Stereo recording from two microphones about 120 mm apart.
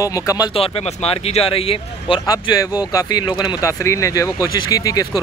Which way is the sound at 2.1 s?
35° left (ahead or behind).